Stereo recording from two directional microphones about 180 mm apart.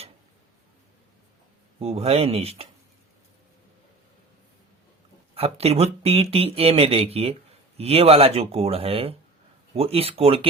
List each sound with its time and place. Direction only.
1.8 s speech: 35° right (ahead or behind)
5.3 s speech: 35° right (ahead or behind)